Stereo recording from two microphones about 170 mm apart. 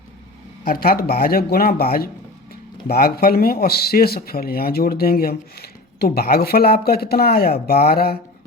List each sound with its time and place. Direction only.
0.6 s speech: 60° left (ahead or behind)